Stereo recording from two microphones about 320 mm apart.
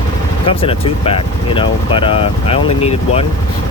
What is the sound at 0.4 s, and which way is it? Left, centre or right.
Speech, centre.